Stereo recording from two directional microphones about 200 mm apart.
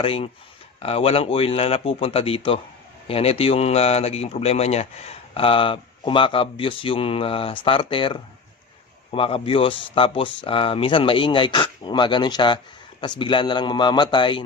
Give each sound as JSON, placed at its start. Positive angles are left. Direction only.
{"t": 0.0, "sound": "speech", "side_deg": 25}